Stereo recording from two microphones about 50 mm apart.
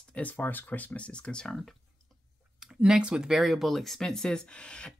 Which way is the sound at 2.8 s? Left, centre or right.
Centre.